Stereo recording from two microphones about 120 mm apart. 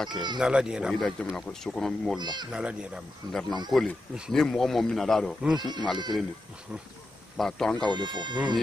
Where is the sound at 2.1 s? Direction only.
35° right (ahead or behind).